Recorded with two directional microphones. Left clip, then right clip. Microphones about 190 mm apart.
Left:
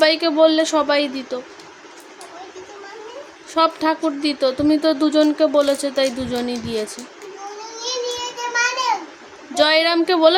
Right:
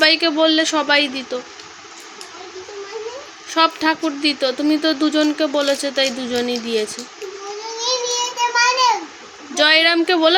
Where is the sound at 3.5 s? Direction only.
10° left (ahead or behind).